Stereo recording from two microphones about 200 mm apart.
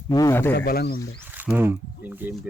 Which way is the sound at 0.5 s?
50° left (ahead or behind).